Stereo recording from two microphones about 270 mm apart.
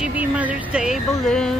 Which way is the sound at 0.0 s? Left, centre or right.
Centre.